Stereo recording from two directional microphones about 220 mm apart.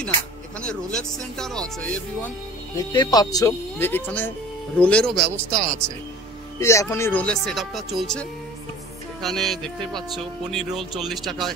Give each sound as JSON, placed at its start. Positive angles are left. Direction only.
{"t": 0.6, "sound": "speech", "side_deg": 5}
{"t": 2.9, "sound": "speech", "side_deg": 20}
{"t": 5.5, "sound": "speech", "side_deg": -35}
{"t": 6.6, "sound": "speech", "side_deg": 15}